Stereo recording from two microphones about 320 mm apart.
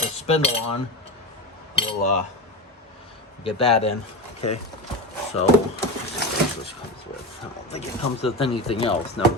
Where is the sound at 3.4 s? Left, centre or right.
Centre.